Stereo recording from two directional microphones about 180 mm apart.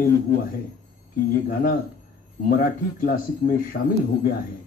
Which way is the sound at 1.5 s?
50° left (ahead or behind).